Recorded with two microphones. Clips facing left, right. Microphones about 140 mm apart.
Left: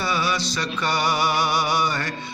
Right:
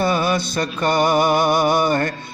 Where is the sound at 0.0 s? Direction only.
50° right (ahead or behind).